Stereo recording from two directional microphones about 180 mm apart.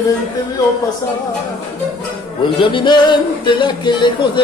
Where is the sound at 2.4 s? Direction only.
25° left (ahead or behind).